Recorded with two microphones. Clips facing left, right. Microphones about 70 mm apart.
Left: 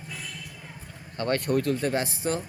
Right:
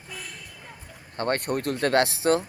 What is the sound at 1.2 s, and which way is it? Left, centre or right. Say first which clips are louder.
Speech: left 1 dB; right.